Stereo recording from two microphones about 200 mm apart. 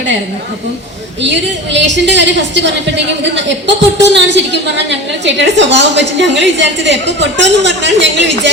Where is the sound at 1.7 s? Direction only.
65° right (ahead or behind).